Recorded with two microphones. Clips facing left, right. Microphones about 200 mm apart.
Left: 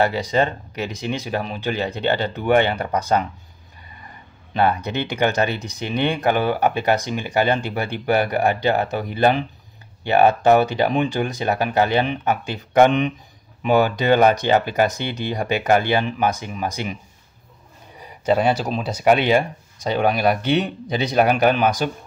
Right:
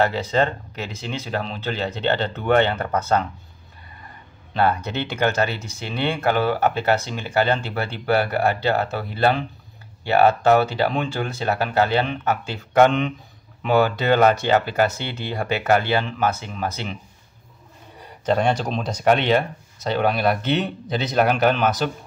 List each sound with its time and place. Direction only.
0.0 s speech: 15° left (ahead or behind)
4.6 s speech: 15° left (ahead or behind)
18.0 s speech: 5° left (ahead or behind)